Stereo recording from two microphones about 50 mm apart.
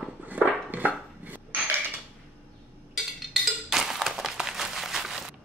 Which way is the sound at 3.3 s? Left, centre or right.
Centre.